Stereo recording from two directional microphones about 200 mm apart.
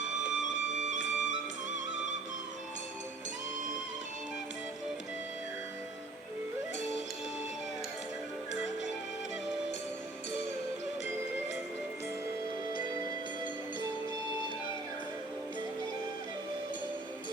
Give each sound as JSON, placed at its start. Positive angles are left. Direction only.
{"t": 0.2, "sound": "music", "side_deg": -40}